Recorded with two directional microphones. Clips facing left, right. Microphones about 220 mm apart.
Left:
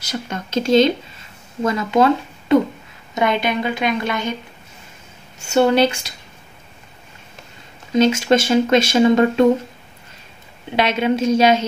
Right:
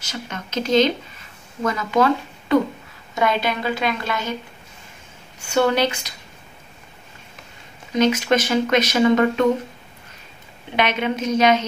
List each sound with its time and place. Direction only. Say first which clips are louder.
0.3 s a sound: left 4 dB; 30° left (ahead or behind)
1.6 s speech: left 3 dB; 25° left (ahead or behind)
5.4 s speech: left 4 dB; 25° left (ahead or behind)
7.9 s speech: left 3 dB; 25° left (ahead or behind)
10.8 s speech: left 4 dB; 30° left (ahead or behind)